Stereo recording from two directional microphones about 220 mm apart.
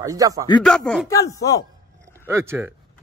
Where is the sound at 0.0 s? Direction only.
15° right (ahead or behind).